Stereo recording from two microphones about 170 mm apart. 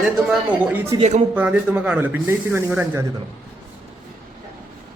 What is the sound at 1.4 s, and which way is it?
Speech, 5° right (ahead or behind).